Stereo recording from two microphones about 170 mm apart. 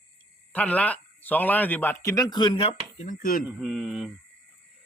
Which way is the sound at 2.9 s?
50° left (ahead or behind).